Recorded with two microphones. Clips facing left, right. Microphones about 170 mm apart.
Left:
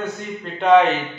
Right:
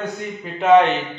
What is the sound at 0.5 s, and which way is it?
Speech, centre (ahead or behind).